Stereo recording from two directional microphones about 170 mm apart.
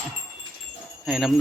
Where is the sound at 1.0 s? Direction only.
Centre (ahead or behind).